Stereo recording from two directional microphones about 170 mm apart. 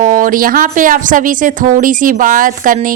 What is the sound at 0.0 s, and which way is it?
Speech, 50° right (ahead or behind).